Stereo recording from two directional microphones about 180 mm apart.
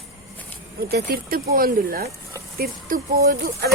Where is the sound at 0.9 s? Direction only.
60° right (ahead or behind).